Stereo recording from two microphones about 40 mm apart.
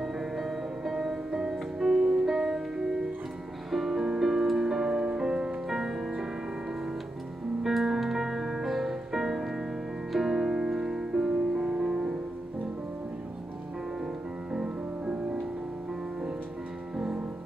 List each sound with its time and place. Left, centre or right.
0.0 s music: centre
4.2 s music: centre
7.6 s music: centre
14.5 s music: right
16.9 s music: centre